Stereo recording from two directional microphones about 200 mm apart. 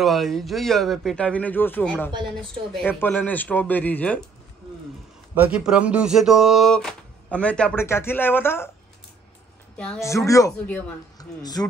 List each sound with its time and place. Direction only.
0.0 s speech: centre (ahead or behind)
5.3 s speech: 5° right (ahead or behind); by 8.6 s 10° left (ahead or behind)
9.8 s speech: 10° left (ahead or behind)